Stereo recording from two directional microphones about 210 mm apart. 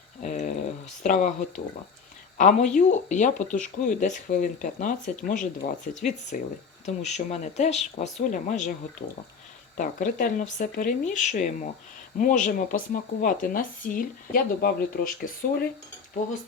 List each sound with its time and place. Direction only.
0.2 s a sound: 35° left (ahead or behind)
1.0 s speech: 35° left (ahead or behind)
9.7 s speech: 40° left (ahead or behind)